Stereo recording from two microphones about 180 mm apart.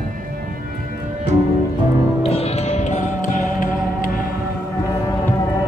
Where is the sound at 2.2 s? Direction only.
35° left (ahead or behind).